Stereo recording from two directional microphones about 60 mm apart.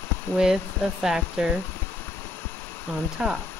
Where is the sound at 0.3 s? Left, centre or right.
Left.